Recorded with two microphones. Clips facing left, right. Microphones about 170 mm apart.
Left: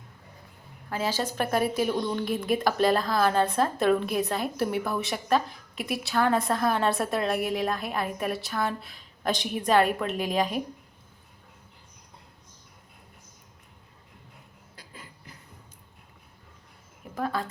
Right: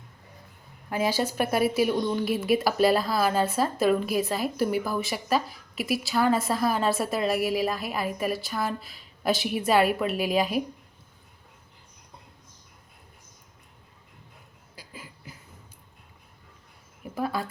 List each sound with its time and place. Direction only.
0.9 s a woman's voice: 15° right (ahead or behind)
14.8 s a sound: 5° right (ahead or behind)
17.2 s speech: 10° right (ahead or behind)